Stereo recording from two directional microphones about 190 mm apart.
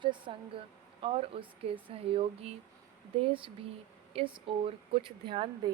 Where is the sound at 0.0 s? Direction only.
25° right (ahead or behind).